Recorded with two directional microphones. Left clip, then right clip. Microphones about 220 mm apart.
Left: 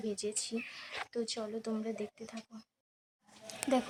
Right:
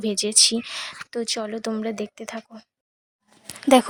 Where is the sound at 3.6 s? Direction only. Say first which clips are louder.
Right 16 dB; 50° right (ahead or behind).